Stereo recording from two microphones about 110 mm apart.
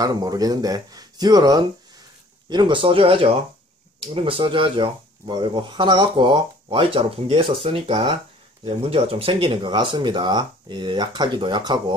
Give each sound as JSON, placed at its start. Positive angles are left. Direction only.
{"t": 0.0, "sound": "speech", "side_deg": -35}